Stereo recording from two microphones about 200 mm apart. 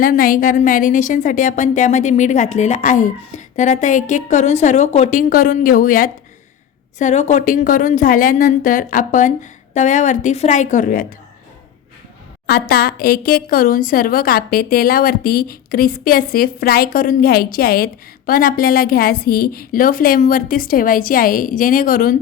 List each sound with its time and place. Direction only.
0.0 s speech: 45° left (ahead or behind)
12.5 s a woman's voice: 50° left (ahead or behind)